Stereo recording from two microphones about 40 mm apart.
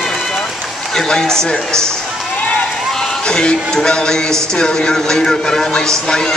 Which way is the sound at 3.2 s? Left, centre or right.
Left.